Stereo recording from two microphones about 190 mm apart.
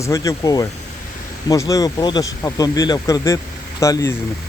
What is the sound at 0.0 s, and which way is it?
Speech, 15° left (ahead or behind).